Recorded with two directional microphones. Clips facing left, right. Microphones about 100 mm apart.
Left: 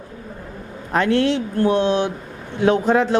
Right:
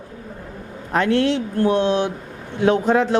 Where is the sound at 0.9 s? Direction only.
25° left (ahead or behind).